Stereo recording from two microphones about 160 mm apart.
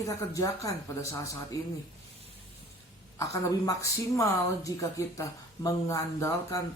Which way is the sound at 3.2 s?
20° left (ahead or behind).